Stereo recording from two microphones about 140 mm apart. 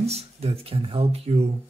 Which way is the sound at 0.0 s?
45° right (ahead or behind).